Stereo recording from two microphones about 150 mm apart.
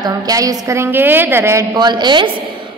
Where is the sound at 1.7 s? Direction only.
30° right (ahead or behind).